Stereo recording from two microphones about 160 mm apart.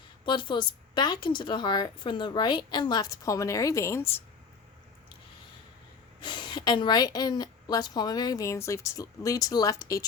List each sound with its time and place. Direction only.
0.3 s a woman's voice: 30° left (ahead or behind)
6.1 s a woman's voice: 30° left (ahead or behind)